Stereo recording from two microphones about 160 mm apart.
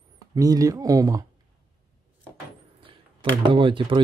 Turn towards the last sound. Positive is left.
turn(degrees=-30)  # may be behind; listen again after turning